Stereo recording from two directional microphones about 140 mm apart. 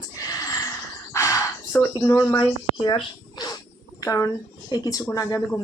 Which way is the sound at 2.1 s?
30° left (ahead or behind).